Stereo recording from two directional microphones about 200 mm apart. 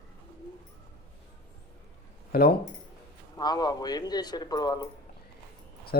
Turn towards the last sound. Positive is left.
turn(degrees=20)  # may be behind; listen again after turning